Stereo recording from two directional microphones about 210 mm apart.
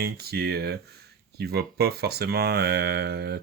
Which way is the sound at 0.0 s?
45° right (ahead or behind).